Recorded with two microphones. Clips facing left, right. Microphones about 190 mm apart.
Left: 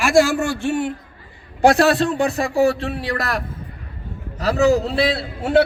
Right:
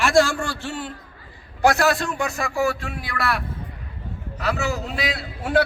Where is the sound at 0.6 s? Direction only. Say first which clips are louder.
Left 9 dB; 25° left (ahead or behind).